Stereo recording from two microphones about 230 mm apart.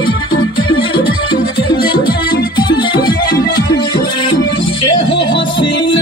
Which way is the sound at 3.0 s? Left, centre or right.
Left.